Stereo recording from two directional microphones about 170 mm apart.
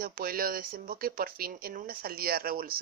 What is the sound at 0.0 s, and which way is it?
Speech, 60° right (ahead or behind).